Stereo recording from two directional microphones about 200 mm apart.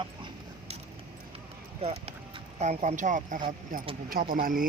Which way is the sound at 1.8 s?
30° right (ahead or behind).